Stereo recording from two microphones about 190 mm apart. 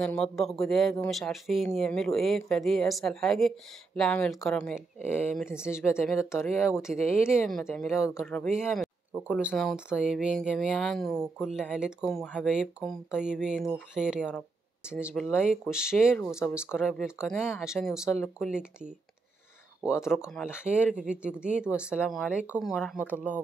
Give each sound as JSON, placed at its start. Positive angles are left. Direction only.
{"t": 0.0, "sound": "speech", "side_deg": 5}
{"t": 5.4, "sound": "speech", "side_deg": -5}
{"t": 5.7, "sound": "speech", "side_deg": 15}
{"t": 6.6, "sound": "speech", "side_deg": -5}
{"t": 7.2, "sound": "speech", "side_deg": 15}
{"t": 7.4, "sound": "speech", "side_deg": 0}
{"t": 7.9, "sound": "speech", "side_deg": 15}
{"t": 8.6, "sound": "a sound", "side_deg": 0}
{"t": 9.5, "sound": "speech", "side_deg": 0}